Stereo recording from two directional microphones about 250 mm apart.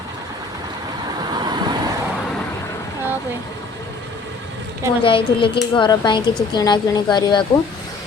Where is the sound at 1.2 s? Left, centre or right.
Centre.